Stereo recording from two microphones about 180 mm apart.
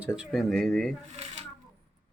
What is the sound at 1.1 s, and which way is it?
Shuffling cards, 35° right (ahead or behind).